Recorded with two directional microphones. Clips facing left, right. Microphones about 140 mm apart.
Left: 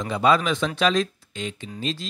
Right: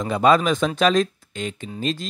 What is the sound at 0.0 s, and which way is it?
Speech, 50° right (ahead or behind).